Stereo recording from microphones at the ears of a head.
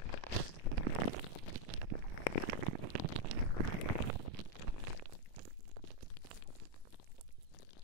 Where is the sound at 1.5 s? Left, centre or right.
Right.